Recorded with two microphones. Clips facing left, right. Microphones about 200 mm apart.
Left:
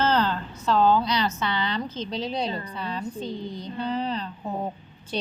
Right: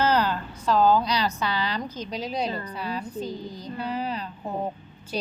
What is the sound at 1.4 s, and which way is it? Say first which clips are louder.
Speech: even; 25° left (ahead or behind).